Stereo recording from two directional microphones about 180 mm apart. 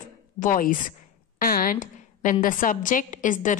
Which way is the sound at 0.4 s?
50° left (ahead or behind).